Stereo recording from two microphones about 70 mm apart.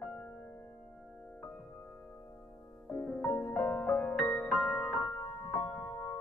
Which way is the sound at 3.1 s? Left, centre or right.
Centre.